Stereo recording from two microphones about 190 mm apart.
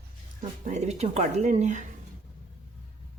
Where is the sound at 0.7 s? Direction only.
35° right (ahead or behind).